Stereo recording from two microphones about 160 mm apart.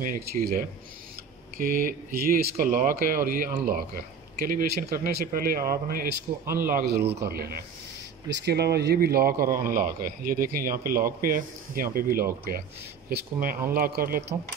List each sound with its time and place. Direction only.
0.0 s a man's voice: 65° right (ahead or behind)
8.3 s a man's voice: 90° right; by 14.2 s 65° right (ahead or behind)